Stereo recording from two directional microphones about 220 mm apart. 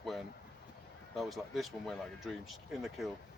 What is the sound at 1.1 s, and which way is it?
Speech, centre (ahead or behind).